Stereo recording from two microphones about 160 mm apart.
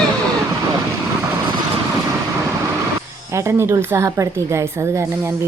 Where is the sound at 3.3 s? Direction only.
15° right (ahead or behind).